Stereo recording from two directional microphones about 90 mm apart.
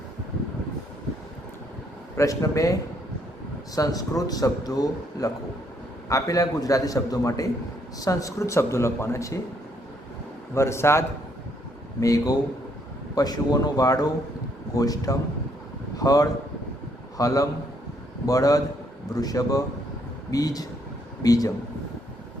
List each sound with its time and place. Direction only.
2.1 s speech: 40° left (ahead or behind)
3.8 s a man's voice: 45° left (ahead or behind)
10.5 s a man's voice: 30° left (ahead or behind)